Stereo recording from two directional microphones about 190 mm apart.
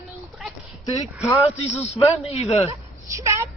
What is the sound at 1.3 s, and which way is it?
A man's voice, 35° left (ahead or behind).